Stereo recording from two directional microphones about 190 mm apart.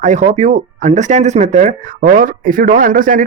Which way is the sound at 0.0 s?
40° right (ahead or behind).